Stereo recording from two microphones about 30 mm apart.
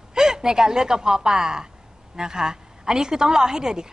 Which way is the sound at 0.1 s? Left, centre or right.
Right.